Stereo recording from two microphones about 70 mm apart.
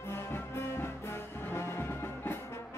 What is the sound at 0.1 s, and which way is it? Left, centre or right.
Music, left.